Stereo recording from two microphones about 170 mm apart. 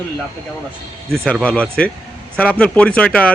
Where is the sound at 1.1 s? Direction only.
5° left (ahead or behind).